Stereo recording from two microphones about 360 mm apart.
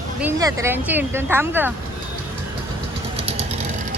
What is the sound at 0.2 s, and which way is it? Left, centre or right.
Speech, centre.